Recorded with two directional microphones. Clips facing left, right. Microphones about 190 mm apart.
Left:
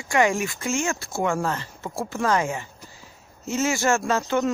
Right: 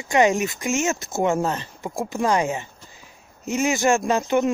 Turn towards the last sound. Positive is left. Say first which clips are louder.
# right 3 dB
turn(degrees=-15)  # may be behind; listen again after turning